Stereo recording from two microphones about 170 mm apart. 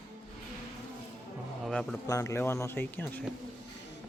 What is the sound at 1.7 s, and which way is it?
Speech, 5° left (ahead or behind).